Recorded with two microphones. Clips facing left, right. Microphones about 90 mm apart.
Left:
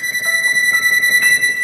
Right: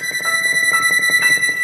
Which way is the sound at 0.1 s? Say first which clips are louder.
Left 1 dB; 45° right (ahead or behind).